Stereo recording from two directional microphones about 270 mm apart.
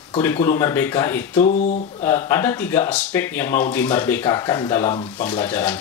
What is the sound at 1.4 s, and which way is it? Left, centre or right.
Speech, left.